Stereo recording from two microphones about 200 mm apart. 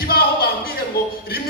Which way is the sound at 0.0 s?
50° left (ahead or behind).